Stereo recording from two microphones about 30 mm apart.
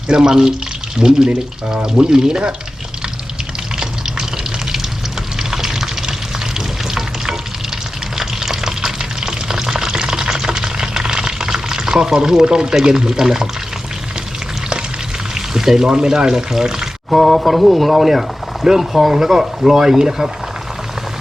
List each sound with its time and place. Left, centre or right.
0.1 s speech: right
5.4 s water: centre
8.2 s frying: centre
15.4 s speech: centre
17.1 s speech: centre